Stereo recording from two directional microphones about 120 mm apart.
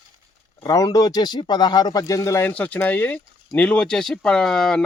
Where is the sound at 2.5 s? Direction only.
10° left (ahead or behind).